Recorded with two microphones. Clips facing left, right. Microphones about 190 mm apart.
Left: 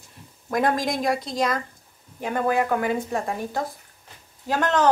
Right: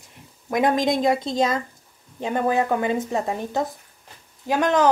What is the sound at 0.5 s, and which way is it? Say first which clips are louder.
A woman's voice: right 3 dB; 20° right (ahead or behind).